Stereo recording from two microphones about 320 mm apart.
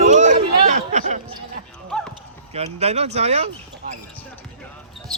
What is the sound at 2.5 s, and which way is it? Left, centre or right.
Speech, centre.